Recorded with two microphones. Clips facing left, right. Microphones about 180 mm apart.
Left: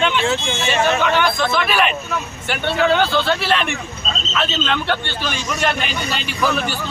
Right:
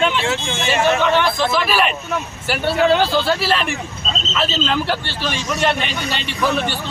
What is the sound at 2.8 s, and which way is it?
Speech, 35° right (ahead or behind).